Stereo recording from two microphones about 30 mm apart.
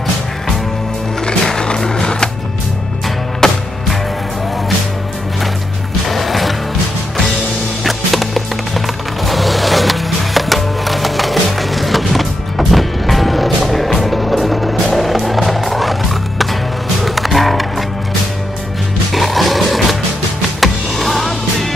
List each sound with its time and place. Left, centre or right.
2.0 s music: left
3.4 s music: left
6.0 s music: centre
7.8 s music: centre
19.1 s music: centre